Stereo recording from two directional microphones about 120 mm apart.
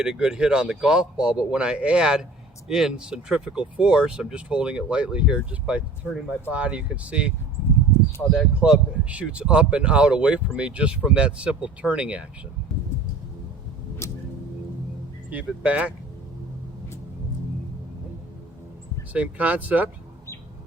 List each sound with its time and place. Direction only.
0.0 s speech: 5° right (ahead or behind)
14.0 s a sound: 25° left (ahead or behind)
15.3 s speech: 10° right (ahead or behind)
19.1 s speech: 10° right (ahead or behind)